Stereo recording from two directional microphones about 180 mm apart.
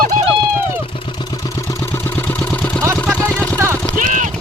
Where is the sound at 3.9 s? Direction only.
45° right (ahead or behind).